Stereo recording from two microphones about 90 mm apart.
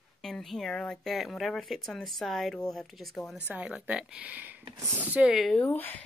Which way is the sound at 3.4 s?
15° right (ahead or behind).